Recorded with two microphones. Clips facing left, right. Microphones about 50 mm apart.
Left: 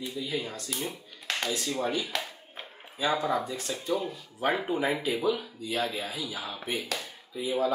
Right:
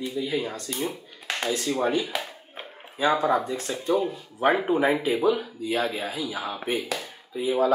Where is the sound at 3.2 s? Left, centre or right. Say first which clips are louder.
Right 5 dB; right.